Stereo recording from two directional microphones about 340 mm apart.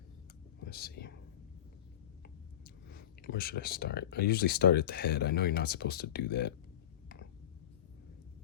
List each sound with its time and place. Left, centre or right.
0.6 s speech: left
2.2 s speech: left